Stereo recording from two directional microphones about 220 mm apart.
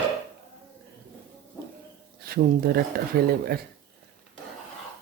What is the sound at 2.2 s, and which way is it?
Speech, 45° right (ahead or behind).